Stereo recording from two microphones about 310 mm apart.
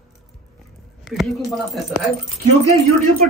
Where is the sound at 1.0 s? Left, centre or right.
Centre.